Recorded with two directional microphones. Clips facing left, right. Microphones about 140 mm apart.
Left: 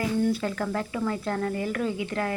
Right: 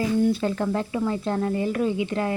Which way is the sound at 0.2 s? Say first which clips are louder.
Right 4 dB; 25° right (ahead or behind).